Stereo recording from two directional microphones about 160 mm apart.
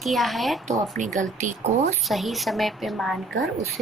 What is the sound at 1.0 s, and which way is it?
Speech, 50° right (ahead or behind).